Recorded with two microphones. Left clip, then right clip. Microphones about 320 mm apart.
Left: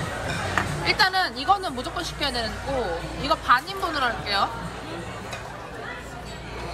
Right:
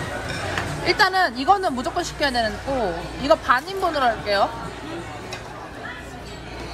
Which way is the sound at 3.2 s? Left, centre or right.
Right.